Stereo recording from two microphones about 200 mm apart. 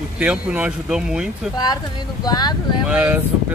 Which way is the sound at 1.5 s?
20° left (ahead or behind).